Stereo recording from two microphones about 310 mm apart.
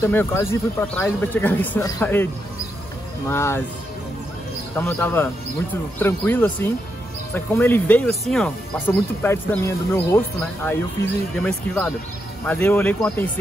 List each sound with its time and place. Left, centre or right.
0.0 s speech: centre
3.3 s speech: centre
4.7 s speech: centre